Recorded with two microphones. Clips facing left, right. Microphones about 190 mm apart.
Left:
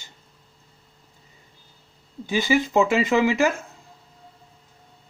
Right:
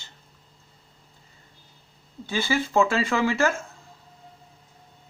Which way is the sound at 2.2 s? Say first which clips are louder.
Left 4 dB; 15° left (ahead or behind).